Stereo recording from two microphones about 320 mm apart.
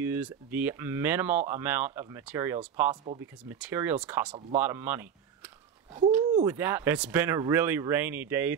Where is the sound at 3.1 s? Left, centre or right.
Right.